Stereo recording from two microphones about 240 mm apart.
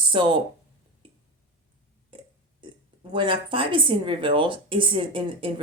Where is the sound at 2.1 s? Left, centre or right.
Right.